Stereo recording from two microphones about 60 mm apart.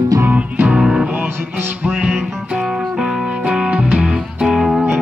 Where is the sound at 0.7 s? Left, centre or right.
Centre.